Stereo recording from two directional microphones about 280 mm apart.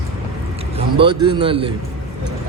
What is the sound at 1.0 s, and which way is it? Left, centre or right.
Speech, centre.